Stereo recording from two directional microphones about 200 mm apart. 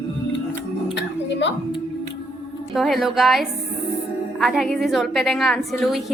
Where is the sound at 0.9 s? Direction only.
60° left (ahead or behind).